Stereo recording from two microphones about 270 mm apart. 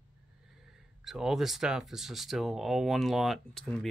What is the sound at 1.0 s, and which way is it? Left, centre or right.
Speech, centre.